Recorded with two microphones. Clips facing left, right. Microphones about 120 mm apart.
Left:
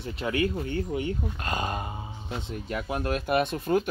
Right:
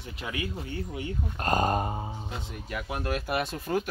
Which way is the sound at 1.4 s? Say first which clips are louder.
Right 9 dB; 45° right (ahead or behind).